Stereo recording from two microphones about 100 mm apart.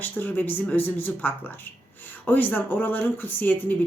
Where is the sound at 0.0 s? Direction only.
20° left (ahead or behind).